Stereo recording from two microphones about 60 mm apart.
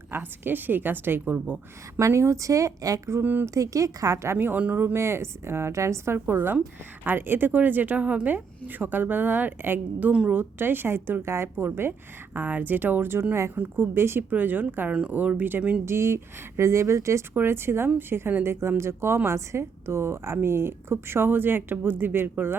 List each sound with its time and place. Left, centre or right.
0.1 s speech: right
2.0 s speech: right
4.9 s a woman's voice: right
6.1 s speech: right
10.1 s speech: right
10.3 s speech: right
11.5 s speech: right
14.8 s speech: centre
15.1 s speech: right
15.9 s a woman's voice: right
17.3 s a woman's voice: right